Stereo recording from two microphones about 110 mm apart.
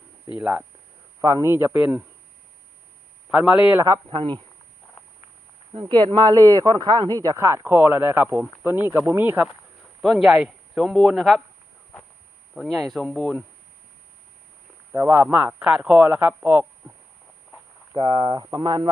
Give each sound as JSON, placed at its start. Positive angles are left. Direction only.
{"t": 0.3, "sound": "a man's voice", "side_deg": -15}
{"t": 1.2, "sound": "a man's voice", "side_deg": -30}
{"t": 3.2, "sound": "a man's voice", "side_deg": -10}
{"t": 3.8, "sound": "speech", "side_deg": -30}
{"t": 4.1, "sound": "speech", "side_deg": -50}
{"t": 5.8, "sound": "a man's voice", "side_deg": -40}
{"t": 10.0, "sound": "speech", "side_deg": -5}
{"t": 12.5, "sound": "speech", "side_deg": 0}
{"t": 14.9, "sound": "speech", "side_deg": -30}
{"t": 15.3, "sound": "a man's voice", "side_deg": -15}
{"t": 17.9, "sound": "speech", "side_deg": -45}